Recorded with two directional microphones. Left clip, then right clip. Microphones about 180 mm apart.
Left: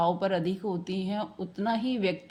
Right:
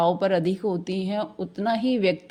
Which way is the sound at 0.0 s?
35° right (ahead or behind).